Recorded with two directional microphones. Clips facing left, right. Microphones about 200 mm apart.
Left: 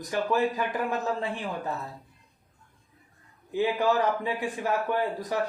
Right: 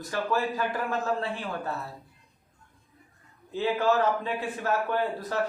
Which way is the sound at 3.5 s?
15° left (ahead or behind).